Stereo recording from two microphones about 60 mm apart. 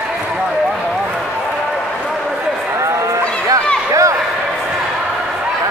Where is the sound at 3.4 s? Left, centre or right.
Right.